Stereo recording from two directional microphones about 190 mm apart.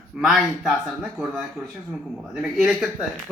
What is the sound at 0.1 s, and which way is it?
Speech, centre (ahead or behind).